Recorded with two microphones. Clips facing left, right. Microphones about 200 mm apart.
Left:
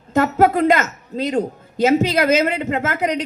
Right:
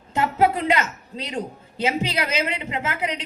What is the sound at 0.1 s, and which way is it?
A woman's voice, 45° left (ahead or behind).